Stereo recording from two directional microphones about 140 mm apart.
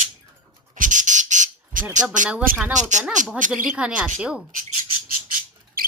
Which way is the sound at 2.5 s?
90° right.